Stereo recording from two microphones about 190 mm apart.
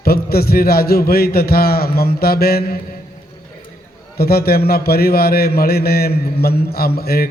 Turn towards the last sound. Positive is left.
turn(degrees=55)  # may be behind; listen again after turning